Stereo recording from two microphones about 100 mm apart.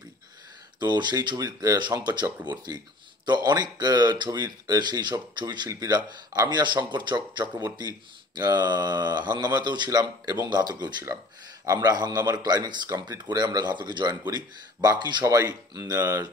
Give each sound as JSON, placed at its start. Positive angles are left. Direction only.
{"t": 0.7, "sound": "speech", "side_deg": -45}
{"t": 15.2, "sound": "speech", "side_deg": -35}